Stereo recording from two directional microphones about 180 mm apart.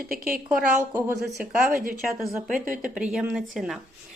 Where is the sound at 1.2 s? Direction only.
5° right (ahead or behind).